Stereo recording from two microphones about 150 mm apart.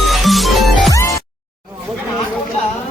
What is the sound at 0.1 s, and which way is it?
Music, centre (ahead or behind).